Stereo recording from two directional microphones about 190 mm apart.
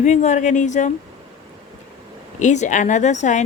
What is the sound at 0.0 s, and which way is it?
Speech, 40° left (ahead or behind).